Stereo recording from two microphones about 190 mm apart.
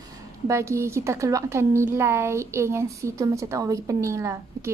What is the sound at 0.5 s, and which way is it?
A woman's voice, 15° right (ahead or behind).